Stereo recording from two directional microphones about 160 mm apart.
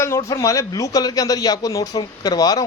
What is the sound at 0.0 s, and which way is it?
A man's voice, 20° left (ahead or behind).